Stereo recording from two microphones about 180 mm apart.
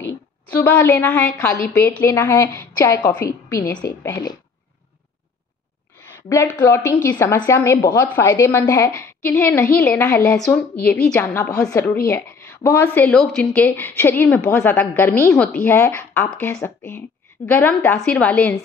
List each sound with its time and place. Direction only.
0.5 s a woman's voice: 10° left (ahead or behind)
6.6 s a woman's voice: 15° left (ahead or behind)